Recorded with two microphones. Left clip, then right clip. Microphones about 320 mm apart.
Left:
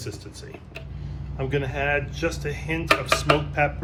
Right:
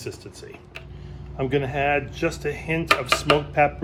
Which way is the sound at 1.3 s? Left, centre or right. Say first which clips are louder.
Right 3 dB; right.